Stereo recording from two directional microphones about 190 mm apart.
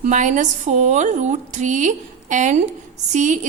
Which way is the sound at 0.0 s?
40° right (ahead or behind).